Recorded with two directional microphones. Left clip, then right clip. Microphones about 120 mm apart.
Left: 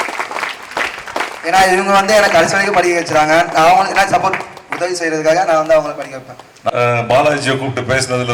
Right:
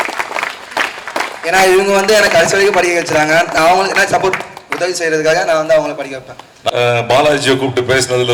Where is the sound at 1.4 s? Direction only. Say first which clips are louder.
Right 1 dB; 15° right (ahead or behind).